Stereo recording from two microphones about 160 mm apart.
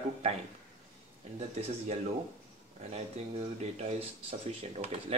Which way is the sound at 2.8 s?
40° right (ahead or behind).